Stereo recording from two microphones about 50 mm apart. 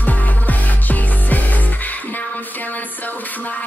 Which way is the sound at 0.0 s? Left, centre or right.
Left.